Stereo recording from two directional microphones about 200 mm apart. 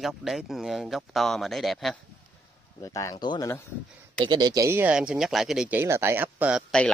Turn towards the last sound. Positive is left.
turn(degrees=-10)  # may be behind; listen again after turning